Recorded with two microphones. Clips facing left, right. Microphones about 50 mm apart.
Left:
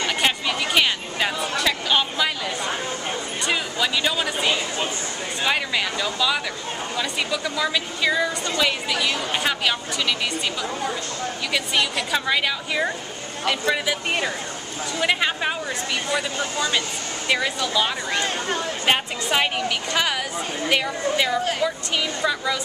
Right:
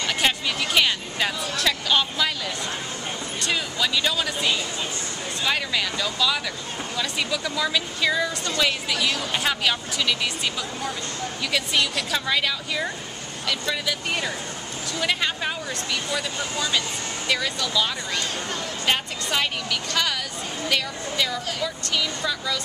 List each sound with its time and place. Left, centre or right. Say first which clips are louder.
0.0 s a sound: left 1 dB; centre
3.3 s a woman's voice: left 1 dB; centre
11.5 s a woman's voice: left 1 dB; centre